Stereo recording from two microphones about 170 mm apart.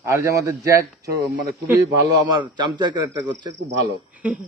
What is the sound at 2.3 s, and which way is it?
Speech, 25° right (ahead or behind).